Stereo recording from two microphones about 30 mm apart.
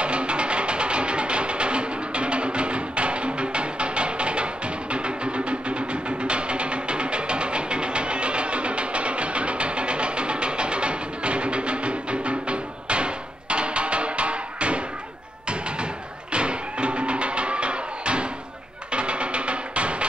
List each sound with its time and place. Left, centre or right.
0.0 s music: right